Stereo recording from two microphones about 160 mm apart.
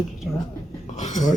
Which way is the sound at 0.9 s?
50° left (ahead or behind).